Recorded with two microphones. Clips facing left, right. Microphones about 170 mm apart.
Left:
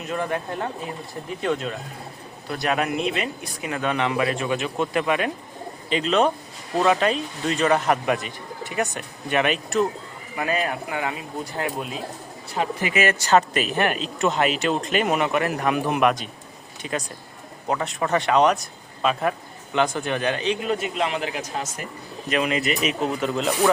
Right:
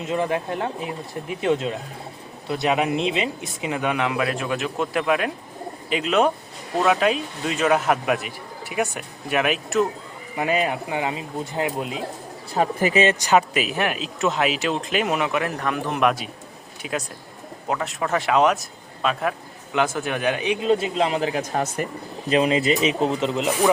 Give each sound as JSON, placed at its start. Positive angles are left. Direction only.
{"t": 0.0, "sound": "speech", "side_deg": -25}
{"t": 3.9, "sound": "a man's voice", "side_deg": -5}
{"t": 10.3, "sound": "speech", "side_deg": -20}
{"t": 12.5, "sound": "speech", "side_deg": -40}
{"t": 13.0, "sound": "a man's voice", "side_deg": -20}
{"t": 15.5, "sound": "a man's voice", "side_deg": 15}
{"t": 16.0, "sound": "a man's voice", "side_deg": 0}
{"t": 20.6, "sound": "speech", "side_deg": -25}
{"t": 22.3, "sound": "speech", "side_deg": -30}